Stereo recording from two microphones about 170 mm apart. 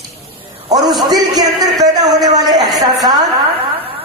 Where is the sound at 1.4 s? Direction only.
25° right (ahead or behind).